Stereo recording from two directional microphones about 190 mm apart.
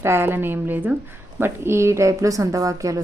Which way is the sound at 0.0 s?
10° right (ahead or behind).